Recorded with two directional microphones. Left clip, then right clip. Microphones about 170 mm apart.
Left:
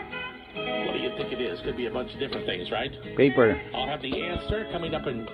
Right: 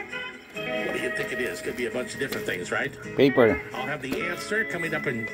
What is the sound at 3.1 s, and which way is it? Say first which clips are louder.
Speech: right 1 dB; 15° right (ahead or behind).